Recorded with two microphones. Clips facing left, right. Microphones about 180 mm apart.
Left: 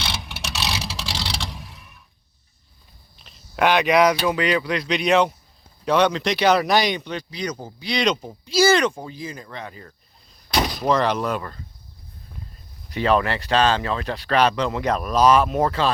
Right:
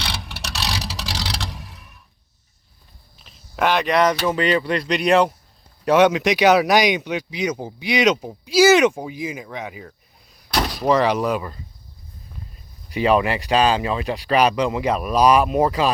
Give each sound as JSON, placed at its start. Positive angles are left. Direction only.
{"t": 0.3, "sound": "vehicle", "side_deg": -35}
{"t": 1.2, "sound": "vehicle", "side_deg": -5}
{"t": 3.2, "sound": "a sound", "side_deg": 0}
{"t": 4.3, "sound": "speech", "side_deg": 0}
{"t": 12.9, "sound": "speech", "side_deg": -10}